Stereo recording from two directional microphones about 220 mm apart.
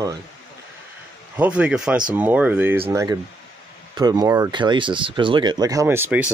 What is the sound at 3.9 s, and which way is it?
Speech, 15° right (ahead or behind).